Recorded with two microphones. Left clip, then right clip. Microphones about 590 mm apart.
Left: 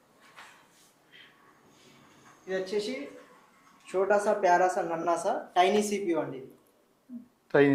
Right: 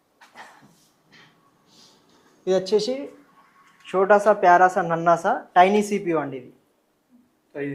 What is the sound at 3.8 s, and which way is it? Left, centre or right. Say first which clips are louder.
A woman's voice: right 9 dB; right.